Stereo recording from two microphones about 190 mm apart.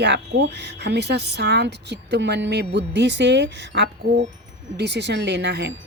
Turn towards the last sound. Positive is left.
turn(degrees=-65)  # may be behind; listen again after turning